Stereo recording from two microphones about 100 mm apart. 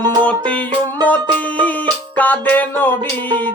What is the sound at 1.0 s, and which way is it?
Music, 15° left (ahead or behind).